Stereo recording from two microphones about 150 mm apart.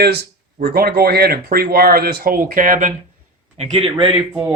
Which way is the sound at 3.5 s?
40° right (ahead or behind).